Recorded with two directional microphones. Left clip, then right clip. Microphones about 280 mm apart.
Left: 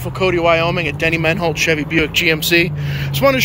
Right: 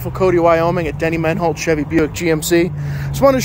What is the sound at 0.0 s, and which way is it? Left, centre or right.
Speech, right.